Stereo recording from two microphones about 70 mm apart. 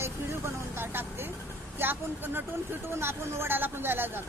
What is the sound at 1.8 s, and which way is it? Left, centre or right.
A woman's voice, right.